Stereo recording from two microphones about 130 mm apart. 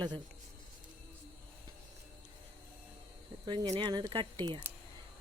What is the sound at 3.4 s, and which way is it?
Speech, 35° right (ahead or behind).